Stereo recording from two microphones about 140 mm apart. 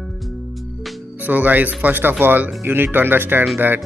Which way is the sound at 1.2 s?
10° right (ahead or behind).